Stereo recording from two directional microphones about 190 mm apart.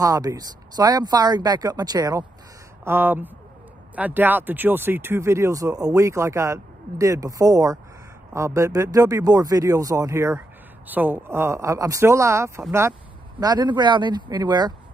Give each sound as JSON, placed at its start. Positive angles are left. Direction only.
{"t": 0.0, "sound": "speech", "side_deg": -20}